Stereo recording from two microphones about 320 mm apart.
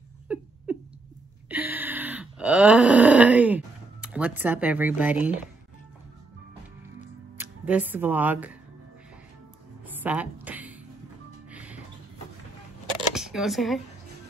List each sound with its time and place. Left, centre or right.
0.3 s a sound: centre
1.5 s groan: centre
7.3 s speech: centre
9.8 s a sound: centre
11.5 s music: centre
13.1 s speech: centre